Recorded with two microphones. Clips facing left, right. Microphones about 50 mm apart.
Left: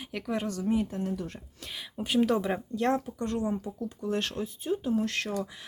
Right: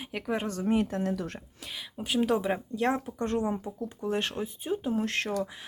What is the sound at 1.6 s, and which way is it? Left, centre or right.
Speech, centre.